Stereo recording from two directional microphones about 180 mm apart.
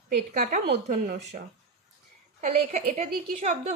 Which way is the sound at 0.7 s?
45° right (ahead or behind).